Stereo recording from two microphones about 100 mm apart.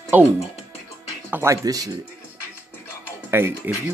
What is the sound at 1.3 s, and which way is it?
Speech, 25° right (ahead or behind).